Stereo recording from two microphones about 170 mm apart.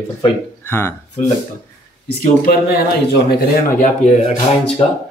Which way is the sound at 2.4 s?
60° left (ahead or behind).